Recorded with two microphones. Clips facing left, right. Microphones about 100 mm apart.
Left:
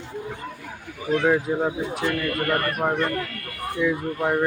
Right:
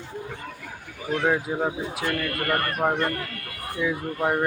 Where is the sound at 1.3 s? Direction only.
5° right (ahead or behind).